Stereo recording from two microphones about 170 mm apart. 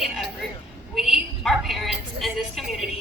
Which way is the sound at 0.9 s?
Centre (ahead or behind).